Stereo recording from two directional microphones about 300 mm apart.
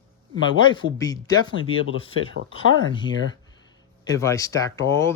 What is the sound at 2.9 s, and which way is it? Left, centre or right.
Speech, centre.